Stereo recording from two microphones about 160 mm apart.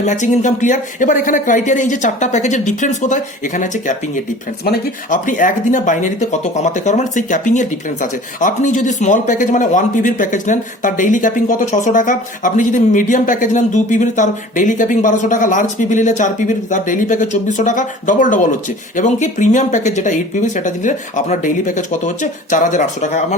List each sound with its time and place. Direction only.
0.0 s speech: 50° left (ahead or behind)
5.1 s speech: 55° left (ahead or behind)